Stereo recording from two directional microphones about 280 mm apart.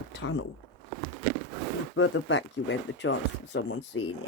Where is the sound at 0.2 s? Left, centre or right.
Left.